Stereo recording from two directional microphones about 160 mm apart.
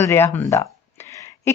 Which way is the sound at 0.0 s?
15° left (ahead or behind).